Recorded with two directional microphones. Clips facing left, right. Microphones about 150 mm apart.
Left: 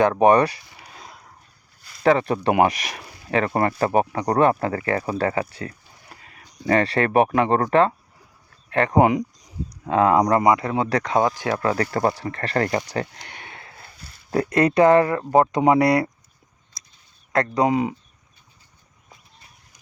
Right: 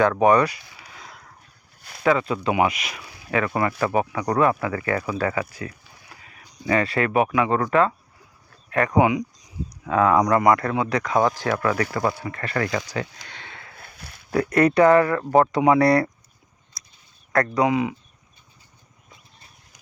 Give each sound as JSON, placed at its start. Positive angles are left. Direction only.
{"t": 0.0, "sound": "speech", "side_deg": 25}
{"t": 1.8, "sound": "a sound", "side_deg": -65}
{"t": 2.2, "sound": "speech", "side_deg": 45}
{"t": 3.2, "sound": "speech", "side_deg": 30}
{"t": 9.0, "sound": "speech", "side_deg": 45}
{"t": 9.8, "sound": "speech", "side_deg": 30}
{"t": 10.4, "sound": "speech", "side_deg": 15}
{"t": 10.8, "sound": "speech", "side_deg": 35}
{"t": 13.4, "sound": "a sound", "side_deg": 20}
{"t": 13.7, "sound": "a sound", "side_deg": -60}
{"t": 14.3, "sound": "speech", "side_deg": 25}
{"t": 17.3, "sound": "speech", "side_deg": 25}
{"t": 17.7, "sound": "speech", "side_deg": 40}